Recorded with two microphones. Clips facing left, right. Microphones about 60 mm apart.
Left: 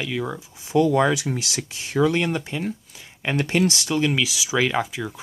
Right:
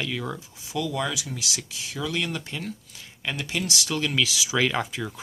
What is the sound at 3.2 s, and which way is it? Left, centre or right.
Speech, left.